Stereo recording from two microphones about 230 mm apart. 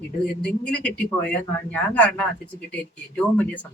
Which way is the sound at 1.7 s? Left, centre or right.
Centre.